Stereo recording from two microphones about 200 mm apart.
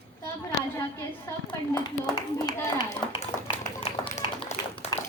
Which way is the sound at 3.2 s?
35° left (ahead or behind).